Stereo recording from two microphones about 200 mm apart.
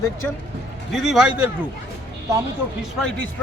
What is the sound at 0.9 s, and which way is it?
Speech, centre (ahead or behind).